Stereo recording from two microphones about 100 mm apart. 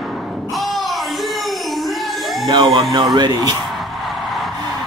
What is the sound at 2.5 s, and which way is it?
Speech, 50° right (ahead or behind).